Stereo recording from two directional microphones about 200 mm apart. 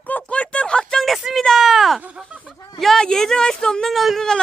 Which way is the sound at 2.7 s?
Centre (ahead or behind).